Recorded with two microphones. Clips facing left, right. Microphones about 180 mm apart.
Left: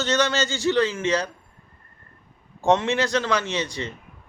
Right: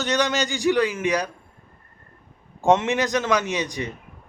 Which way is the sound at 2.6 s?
15° right (ahead or behind).